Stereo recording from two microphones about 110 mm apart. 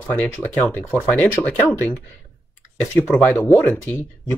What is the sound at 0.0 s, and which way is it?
Speech, 15° left (ahead or behind).